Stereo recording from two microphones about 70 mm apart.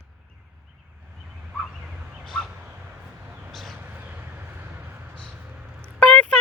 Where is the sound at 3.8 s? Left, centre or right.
Right.